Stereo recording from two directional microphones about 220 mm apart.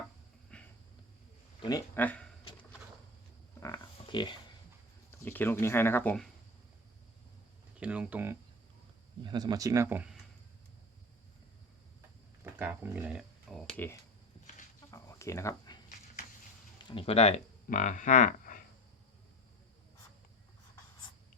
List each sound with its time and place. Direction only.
0.5 s a sound: 5° left (ahead or behind)
1.6 s speech: 10° left (ahead or behind)
3.6 s pig: 20° left (ahead or behind)
5.2 s speech: 10° left (ahead or behind)
7.8 s speech: 5° right (ahead or behind)
9.2 s speech: 20° right (ahead or behind)
12.5 s speech: 10° right (ahead or behind); by 14.0 s 10° left (ahead or behind)
14.8 s a sound: 15° left (ahead or behind)
16.9 s speech: 25° left (ahead or behind)